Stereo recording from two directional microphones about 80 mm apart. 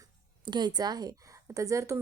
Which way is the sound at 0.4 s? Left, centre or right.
Right.